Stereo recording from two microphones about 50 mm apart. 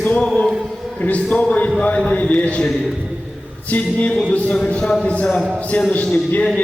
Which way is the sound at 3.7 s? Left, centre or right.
Left.